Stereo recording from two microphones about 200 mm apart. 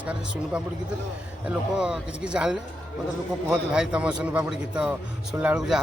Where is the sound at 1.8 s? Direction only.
5° right (ahead or behind).